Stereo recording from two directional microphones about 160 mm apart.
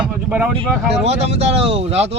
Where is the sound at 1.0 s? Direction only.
40° right (ahead or behind).